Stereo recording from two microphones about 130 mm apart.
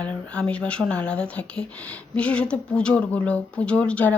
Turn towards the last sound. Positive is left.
turn(degrees=10)  # may be behind; listen again after turning